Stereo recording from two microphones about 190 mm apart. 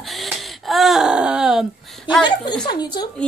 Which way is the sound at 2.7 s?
20° left (ahead or behind).